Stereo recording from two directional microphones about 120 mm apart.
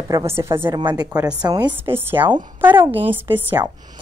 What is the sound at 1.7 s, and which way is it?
Speech, 20° right (ahead or behind).